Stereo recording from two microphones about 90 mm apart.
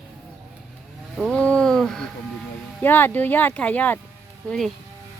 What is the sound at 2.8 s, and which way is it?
Speech, 20° left (ahead or behind).